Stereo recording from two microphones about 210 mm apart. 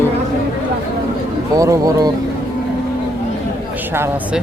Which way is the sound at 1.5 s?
15° right (ahead or behind).